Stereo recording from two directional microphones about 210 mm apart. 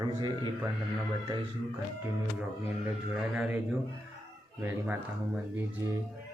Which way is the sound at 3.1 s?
5° right (ahead or behind).